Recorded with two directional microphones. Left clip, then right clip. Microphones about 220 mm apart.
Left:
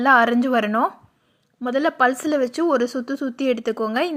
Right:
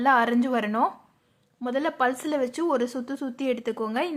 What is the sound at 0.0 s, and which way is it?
Speech, 15° left (ahead or behind).